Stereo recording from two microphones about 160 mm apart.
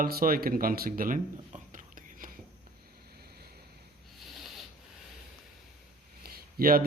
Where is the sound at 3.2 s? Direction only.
80° right.